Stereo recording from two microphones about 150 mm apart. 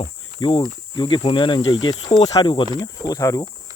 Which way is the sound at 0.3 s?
30° left (ahead or behind).